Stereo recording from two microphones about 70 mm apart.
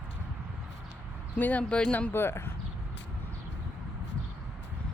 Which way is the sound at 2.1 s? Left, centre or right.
Left.